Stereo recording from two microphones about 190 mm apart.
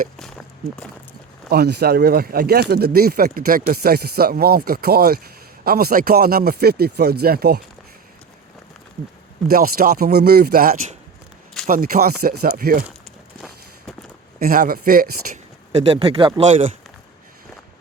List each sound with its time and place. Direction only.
0.2 s a sound: 5° left (ahead or behind)
1.5 s speech: 60° right (ahead or behind)
9.5 s speech: 50° right (ahead or behind)
14.3 s speech: 50° right (ahead or behind)
15.9 s speech: 25° right (ahead or behind)